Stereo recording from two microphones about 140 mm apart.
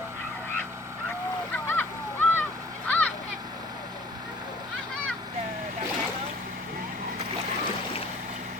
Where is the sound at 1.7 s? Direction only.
15° left (ahead or behind).